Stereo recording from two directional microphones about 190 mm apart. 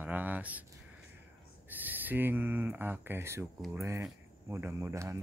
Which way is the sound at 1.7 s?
10° right (ahead or behind).